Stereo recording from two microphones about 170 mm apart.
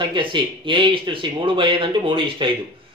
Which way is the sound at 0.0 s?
30° right (ahead or behind).